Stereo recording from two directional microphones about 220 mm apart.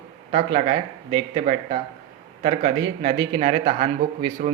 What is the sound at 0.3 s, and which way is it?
Speech, 35° right (ahead or behind).